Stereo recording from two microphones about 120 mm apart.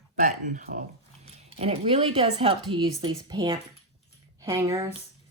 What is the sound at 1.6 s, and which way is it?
Speech, 50° right (ahead or behind).